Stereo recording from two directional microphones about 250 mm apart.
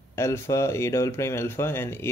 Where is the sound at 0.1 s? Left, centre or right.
Centre.